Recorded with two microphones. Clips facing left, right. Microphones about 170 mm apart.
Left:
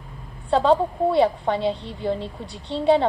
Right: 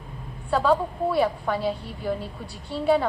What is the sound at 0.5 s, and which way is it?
A woman's voice, 25° left (ahead or behind).